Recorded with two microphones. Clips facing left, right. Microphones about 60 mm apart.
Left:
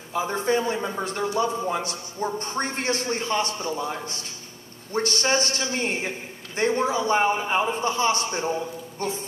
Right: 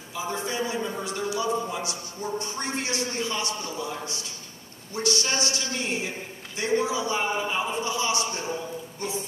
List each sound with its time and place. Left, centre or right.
0.1 s a man's voice: left
0.7 s a man's voice: left
1.0 s a man's voice: left